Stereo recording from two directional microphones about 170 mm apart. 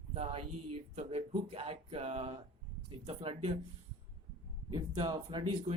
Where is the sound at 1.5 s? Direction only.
35° right (ahead or behind).